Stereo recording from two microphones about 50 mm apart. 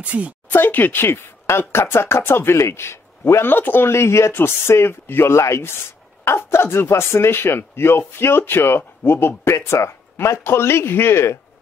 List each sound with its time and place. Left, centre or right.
0.0 s speech: right
0.5 s speech: left
1.7 s speech: left
3.9 s speech: left
4.3 s speech: left
5.3 s speech: left
6.2 s speech: left
9.4 s speech: left